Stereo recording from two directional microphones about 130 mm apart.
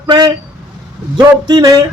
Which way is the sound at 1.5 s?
30° right (ahead or behind).